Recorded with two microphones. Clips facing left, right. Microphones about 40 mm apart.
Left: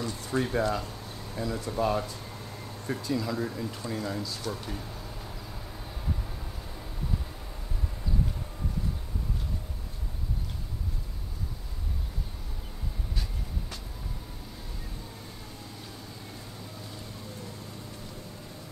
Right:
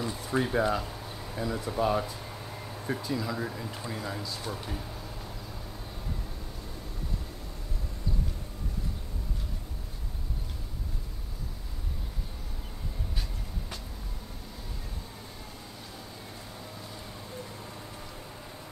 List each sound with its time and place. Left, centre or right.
0.0 s speech: centre